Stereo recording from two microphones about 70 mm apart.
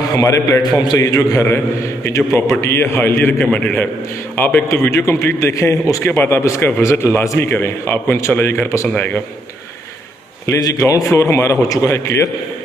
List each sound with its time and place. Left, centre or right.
0.1 s a man's voice: left
0.6 s a man's voice: left
0.9 s a man's voice: left
4.9 s a man's voice: left
6.0 s a man's voice: left
10.6 s a man's voice: left